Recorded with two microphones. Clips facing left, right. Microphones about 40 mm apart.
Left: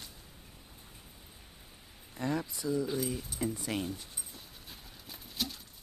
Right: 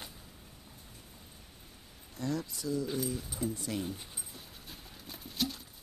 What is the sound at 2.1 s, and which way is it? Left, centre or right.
Speech, left.